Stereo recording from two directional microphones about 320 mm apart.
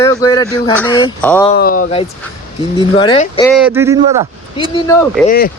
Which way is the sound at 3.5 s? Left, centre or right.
Centre.